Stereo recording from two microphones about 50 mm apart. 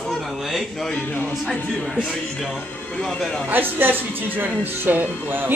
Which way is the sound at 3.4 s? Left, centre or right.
Right.